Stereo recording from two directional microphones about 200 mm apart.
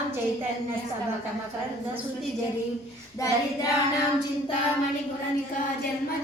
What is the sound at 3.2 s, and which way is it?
Speech, 15° left (ahead or behind).